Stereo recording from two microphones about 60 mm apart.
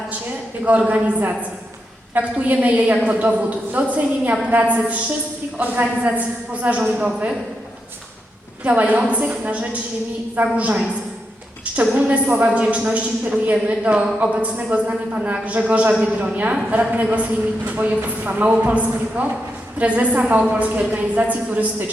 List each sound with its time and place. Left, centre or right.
0.6 s speech: right
8.6 s speech: right
11.9 s speech: right